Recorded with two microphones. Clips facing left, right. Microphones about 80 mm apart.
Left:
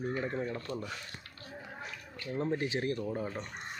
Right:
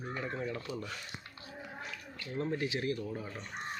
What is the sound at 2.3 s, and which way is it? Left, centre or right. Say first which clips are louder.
Speech: left 2 dB; left.